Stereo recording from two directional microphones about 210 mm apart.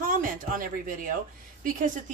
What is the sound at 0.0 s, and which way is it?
A woman's voice, 40° right (ahead or behind).